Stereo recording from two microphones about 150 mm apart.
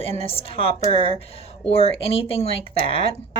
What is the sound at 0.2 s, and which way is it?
Speech, 40° left (ahead or behind).